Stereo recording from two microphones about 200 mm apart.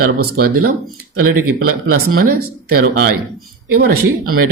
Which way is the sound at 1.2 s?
90° right.